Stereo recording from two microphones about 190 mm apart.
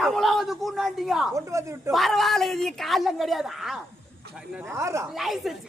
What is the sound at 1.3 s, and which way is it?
Speech, 15° right (ahead or behind).